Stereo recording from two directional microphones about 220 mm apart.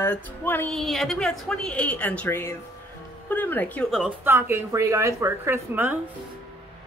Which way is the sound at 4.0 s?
10° right (ahead or behind).